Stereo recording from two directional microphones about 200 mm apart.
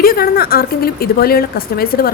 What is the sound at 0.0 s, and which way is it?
A woman's voice, 50° left (ahead or behind).